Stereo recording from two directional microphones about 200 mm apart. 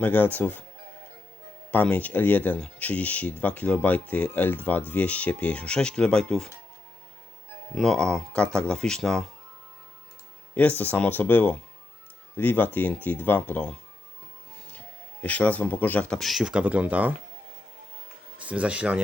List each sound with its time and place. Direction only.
0.0 s speech: 10° left (ahead or behind)
1.7 s speech: 10° left (ahead or behind)
7.8 s speech: centre (ahead or behind)
10.5 s speech: 10° left (ahead or behind)
15.2 s speech: 5° left (ahead or behind); by 17.2 s 10° right (ahead or behind)
18.3 s speech: 5° right (ahead or behind)